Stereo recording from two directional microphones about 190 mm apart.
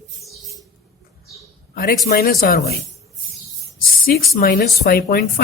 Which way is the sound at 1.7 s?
50° left (ahead or behind).